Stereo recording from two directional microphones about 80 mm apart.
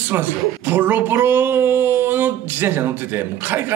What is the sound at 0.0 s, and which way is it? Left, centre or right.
Speech, right.